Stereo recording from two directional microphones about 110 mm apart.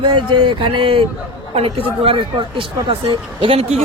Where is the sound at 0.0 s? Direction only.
50° right (ahead or behind).